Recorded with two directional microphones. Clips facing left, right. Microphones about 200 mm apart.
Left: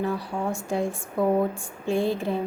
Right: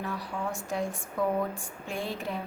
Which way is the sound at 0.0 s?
30° left (ahead or behind).